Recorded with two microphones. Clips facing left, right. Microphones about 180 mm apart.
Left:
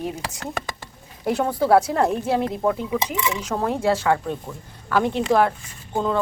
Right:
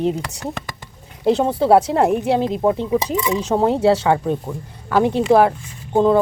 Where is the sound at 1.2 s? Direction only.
25° right (ahead or behind).